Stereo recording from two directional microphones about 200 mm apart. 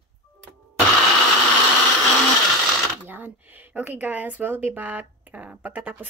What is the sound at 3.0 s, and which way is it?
Speech, 10° right (ahead or behind).